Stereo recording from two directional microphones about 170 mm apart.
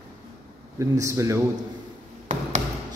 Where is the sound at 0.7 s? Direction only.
20° right (ahead or behind).